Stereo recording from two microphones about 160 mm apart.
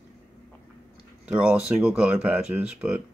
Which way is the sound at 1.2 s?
5° right (ahead or behind).